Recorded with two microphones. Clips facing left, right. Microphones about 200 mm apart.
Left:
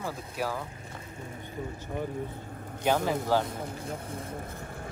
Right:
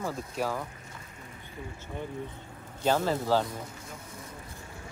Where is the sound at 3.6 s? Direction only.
60° left (ahead or behind).